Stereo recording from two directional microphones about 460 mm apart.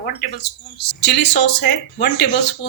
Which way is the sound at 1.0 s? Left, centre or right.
Left.